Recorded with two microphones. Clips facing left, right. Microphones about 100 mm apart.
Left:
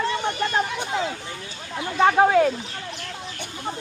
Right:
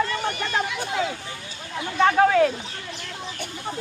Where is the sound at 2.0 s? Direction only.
15° left (ahead or behind).